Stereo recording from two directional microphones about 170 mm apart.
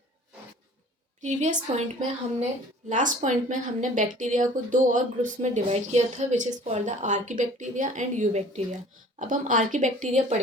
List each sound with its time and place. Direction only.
1.2 s speech: 45° right (ahead or behind)